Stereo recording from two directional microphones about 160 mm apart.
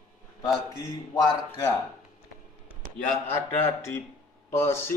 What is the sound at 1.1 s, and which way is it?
Speech, 25° left (ahead or behind).